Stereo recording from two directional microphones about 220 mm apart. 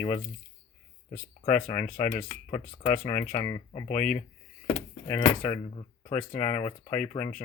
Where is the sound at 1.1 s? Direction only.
30° left (ahead or behind).